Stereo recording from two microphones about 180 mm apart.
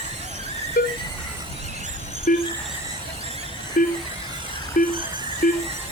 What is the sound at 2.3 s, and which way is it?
Speech, 50° left (ahead or behind).